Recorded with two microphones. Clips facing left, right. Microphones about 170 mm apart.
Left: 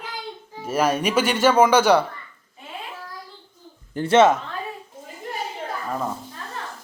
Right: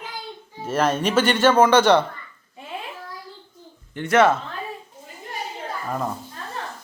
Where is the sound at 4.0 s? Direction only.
25° left (ahead or behind).